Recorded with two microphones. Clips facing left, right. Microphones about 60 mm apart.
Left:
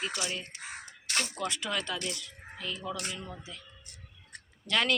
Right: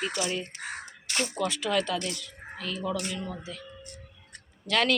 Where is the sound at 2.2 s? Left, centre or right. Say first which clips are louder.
Right 3 dB; centre.